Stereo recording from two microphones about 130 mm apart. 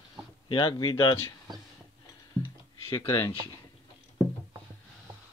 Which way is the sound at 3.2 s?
30° left (ahead or behind).